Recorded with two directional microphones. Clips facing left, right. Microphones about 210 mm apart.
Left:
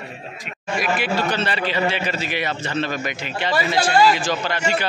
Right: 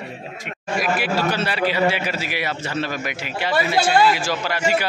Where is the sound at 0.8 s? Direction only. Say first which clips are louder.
Even; 5° right (ahead or behind).